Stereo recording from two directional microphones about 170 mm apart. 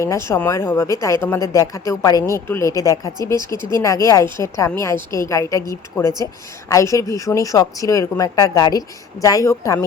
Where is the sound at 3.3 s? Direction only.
25° right (ahead or behind).